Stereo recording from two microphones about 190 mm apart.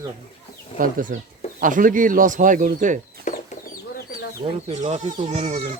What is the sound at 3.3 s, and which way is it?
Chicken, 40° left (ahead or behind).